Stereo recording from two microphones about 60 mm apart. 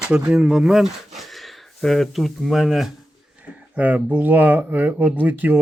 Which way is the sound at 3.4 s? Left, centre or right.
Right.